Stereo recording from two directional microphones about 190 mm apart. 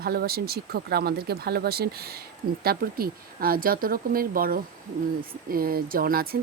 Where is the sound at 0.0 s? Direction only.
55° right (ahead or behind).